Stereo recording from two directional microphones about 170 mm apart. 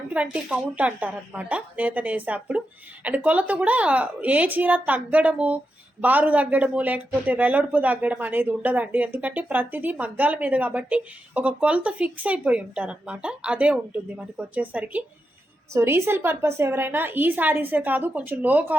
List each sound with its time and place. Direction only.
0.1 s a woman's voice: 5° right (ahead or behind)